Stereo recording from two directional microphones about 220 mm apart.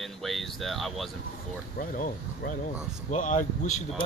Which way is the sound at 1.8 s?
35° left (ahead or behind).